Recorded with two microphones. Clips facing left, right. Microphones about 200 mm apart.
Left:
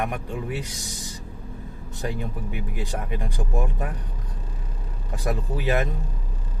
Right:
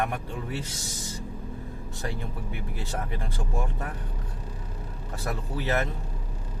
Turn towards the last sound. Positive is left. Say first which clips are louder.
# left 3 dB
turn(degrees=15)  # may be behind; listen again after turning